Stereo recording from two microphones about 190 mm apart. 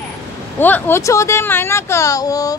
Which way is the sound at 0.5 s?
10° left (ahead or behind).